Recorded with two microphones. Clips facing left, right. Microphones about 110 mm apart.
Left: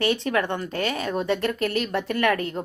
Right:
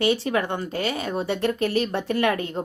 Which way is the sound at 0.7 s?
5° right (ahead or behind).